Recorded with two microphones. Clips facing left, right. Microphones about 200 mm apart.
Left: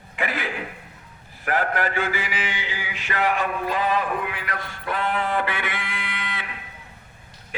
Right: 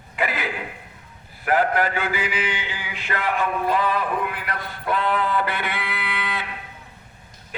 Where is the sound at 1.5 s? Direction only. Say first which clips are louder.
Right 2 dB; 45° left (ahead or behind).